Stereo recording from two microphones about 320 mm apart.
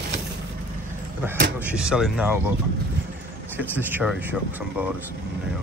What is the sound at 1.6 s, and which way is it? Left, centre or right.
Speech, centre.